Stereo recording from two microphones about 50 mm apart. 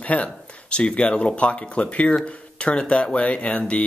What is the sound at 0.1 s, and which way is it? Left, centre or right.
Speech, left.